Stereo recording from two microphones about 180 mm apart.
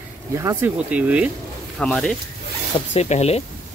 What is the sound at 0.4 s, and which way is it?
Speech, 15° right (ahead or behind).